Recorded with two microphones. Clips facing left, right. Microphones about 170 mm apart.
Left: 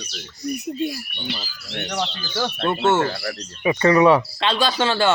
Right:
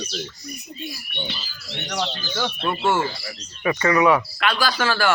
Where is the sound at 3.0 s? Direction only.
60° left (ahead or behind).